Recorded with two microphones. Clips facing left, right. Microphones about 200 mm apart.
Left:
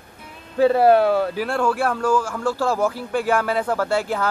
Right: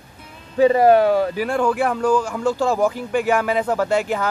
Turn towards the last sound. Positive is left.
turn(degrees=-15)  # may be behind; listen again after turning